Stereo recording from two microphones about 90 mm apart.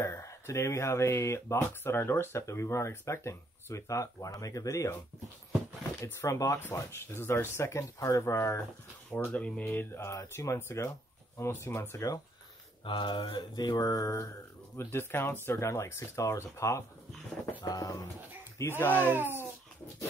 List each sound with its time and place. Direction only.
0.0 s speech: 35° left (ahead or behind)
5.9 s speech: 30° left (ahead or behind)
9.1 s speech: 15° left (ahead or behind); by 12.2 s 35° left (ahead or behind)
12.8 s mantra: 60° left (ahead or behind); by 14.3 s 40° left (ahead or behind)
14.8 s speech: 25° left (ahead or behind)
17.6 s mantra: 45° left (ahead or behind)
18.6 s speech: 25° left (ahead or behind)
19.0 s speech: 25° right (ahead or behind)